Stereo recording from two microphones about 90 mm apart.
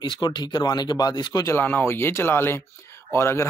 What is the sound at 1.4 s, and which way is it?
Speech, 25° left (ahead or behind).